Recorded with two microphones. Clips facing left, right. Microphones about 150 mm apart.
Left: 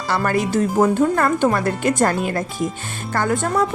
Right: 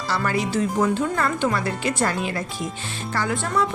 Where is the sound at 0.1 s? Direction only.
50° left (ahead or behind).